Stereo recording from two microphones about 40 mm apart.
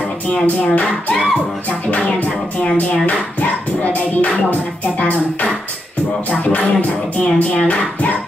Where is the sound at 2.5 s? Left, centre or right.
Left.